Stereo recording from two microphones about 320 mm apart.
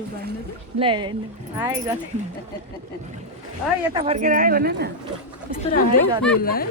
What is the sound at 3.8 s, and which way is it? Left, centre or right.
A woman's voice, centre.